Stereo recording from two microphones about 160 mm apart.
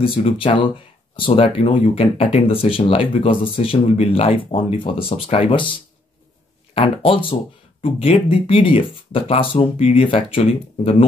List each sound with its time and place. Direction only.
0.0 s speech: 35° left (ahead or behind)